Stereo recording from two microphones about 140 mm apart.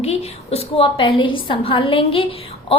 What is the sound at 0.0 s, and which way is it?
A woman's voice, 50° left (ahead or behind).